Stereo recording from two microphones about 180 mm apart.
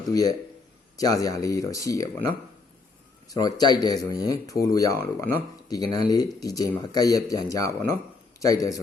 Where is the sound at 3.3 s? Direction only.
20° left (ahead or behind).